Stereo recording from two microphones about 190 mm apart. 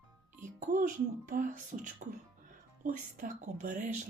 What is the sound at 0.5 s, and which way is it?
Speech, 45° right (ahead or behind).